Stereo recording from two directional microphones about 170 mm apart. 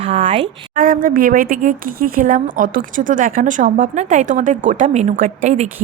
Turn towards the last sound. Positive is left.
turn(degrees=-45)  # may be behind; listen again after turning